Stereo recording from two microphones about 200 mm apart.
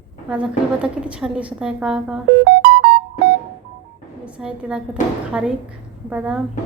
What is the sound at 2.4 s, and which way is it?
Music, 50° right (ahead or behind).